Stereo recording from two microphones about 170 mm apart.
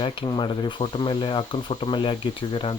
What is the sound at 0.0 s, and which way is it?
Speech, 30° left (ahead or behind).